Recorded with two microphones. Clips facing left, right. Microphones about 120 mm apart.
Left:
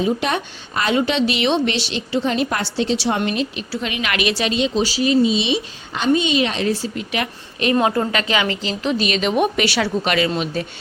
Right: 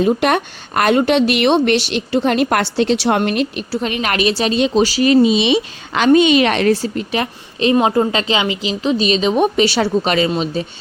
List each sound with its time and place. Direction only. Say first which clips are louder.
0.0 s a woman's voice: right 5 dB; 60° right (ahead or behind)
3.7 s a woman's voice: right 5 dB; 40° right (ahead or behind)
4.6 s a woman's voice: right 6 dB; 55° right (ahead or behind)
6.9 s a woman's voice: right 4 dB; 35° right (ahead or behind)